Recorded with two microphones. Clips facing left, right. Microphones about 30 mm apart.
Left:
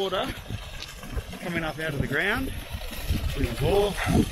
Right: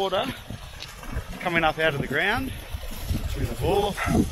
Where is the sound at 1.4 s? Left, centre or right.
Right.